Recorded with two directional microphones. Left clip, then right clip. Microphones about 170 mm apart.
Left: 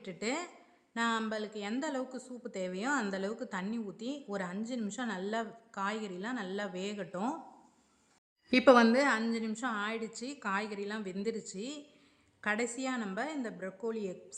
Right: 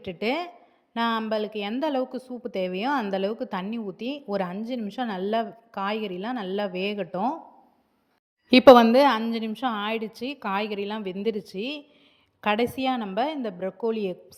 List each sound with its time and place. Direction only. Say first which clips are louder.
0.0 s a woman's voice: right 9 dB; 30° right (ahead or behind)
8.4 s a woman's voice: right 10 dB; 35° right (ahead or behind)